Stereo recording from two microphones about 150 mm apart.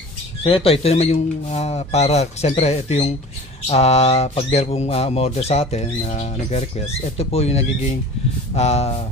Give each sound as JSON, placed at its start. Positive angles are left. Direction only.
{"t": 0.4, "sound": "speech", "side_deg": 40}